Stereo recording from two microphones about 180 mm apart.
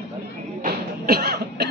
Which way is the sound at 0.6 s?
60° right (ahead or behind).